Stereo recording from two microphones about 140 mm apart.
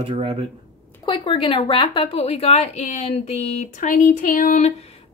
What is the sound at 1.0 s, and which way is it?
A woman's voice, 35° left (ahead or behind).